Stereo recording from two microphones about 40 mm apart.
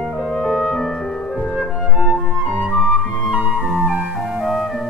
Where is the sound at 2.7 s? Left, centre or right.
Left.